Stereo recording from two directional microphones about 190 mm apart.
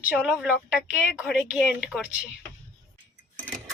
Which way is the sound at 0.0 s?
5° right (ahead or behind).